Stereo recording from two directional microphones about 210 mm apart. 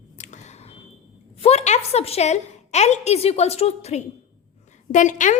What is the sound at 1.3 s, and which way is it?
A woman's voice, 30° left (ahead or behind).